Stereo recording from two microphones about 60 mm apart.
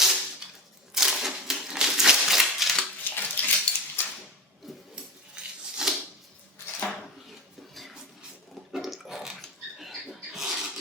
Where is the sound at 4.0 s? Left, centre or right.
Left.